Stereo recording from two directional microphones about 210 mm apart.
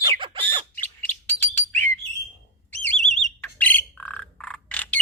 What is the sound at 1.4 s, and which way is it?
Bird, 10° left (ahead or behind).